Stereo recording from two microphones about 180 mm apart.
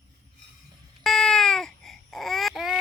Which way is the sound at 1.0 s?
Centre (ahead or behind).